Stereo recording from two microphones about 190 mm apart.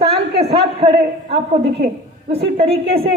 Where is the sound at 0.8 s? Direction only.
30° right (ahead or behind).